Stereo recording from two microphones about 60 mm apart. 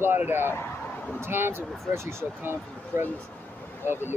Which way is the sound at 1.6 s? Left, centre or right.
Centre.